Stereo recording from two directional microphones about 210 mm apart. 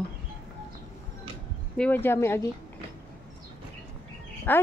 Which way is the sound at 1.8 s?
10° left (ahead or behind).